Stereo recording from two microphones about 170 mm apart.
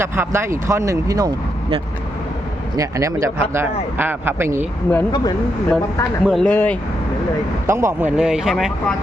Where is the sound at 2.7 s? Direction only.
20° right (ahead or behind).